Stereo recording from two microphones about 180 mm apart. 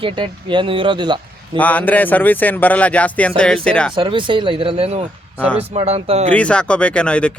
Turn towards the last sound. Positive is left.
turn(degrees=5)  # may be behind; listen again after turning